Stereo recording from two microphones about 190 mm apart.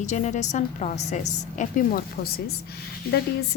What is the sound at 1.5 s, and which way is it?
A woman's voice, 45° left (ahead or behind).